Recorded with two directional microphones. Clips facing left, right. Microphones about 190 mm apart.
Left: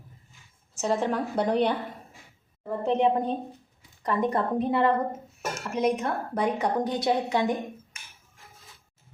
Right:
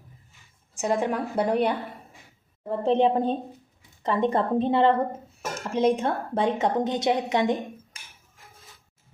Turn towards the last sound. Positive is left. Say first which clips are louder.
# right 2 dB
turn(degrees=-20)  # may be behind; listen again after turning